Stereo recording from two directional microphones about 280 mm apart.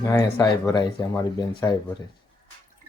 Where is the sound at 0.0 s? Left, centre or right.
Centre.